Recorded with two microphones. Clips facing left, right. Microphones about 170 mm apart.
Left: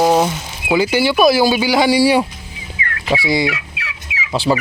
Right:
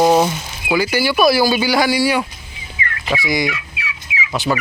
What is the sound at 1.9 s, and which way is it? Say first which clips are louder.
Speech: left 4 dB; 30° left (ahead or behind).